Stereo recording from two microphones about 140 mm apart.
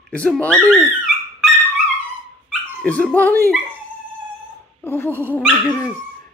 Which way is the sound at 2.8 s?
10° left (ahead or behind).